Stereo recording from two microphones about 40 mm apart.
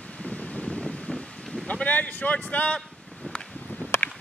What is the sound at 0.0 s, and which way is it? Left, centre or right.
Wind, left.